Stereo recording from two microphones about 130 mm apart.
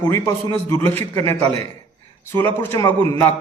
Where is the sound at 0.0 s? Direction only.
20° left (ahead or behind).